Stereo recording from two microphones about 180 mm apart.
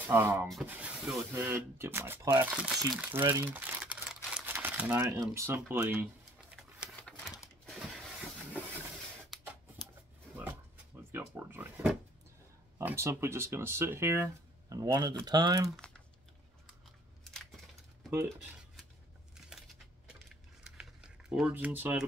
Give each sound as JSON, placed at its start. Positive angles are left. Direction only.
{"t": 0.0, "sound": "speech", "side_deg": -15}
{"t": 0.5, "sound": "speech", "side_deg": -5}
{"t": 7.0, "sound": "typewriter", "side_deg": 5}
{"t": 11.1, "sound": "speech", "side_deg": -10}
{"t": 17.2, "sound": "a sound", "side_deg": 0}
{"t": 18.1, "sound": "speech", "side_deg": -15}
{"t": 20.6, "sound": "typing", "side_deg": -5}